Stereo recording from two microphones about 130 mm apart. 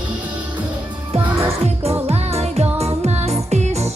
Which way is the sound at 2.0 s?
50° right (ahead or behind).